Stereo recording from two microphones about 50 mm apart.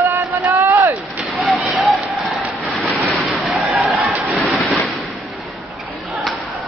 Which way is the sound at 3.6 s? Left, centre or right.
Right.